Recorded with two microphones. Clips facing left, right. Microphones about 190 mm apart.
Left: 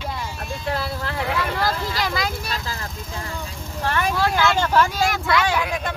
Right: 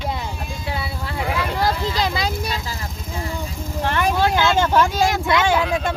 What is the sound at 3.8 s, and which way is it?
Speech, 20° right (ahead or behind).